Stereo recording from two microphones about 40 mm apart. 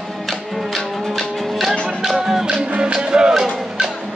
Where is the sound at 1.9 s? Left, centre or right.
Centre.